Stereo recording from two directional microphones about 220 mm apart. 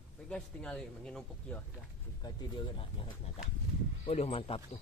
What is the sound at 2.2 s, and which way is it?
Speech, 20° left (ahead or behind).